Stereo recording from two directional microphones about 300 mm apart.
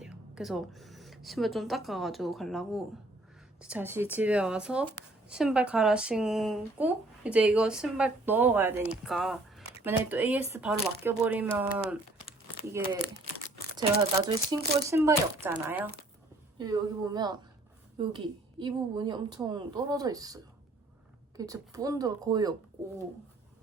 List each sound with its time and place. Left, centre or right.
0.0 s speech: centre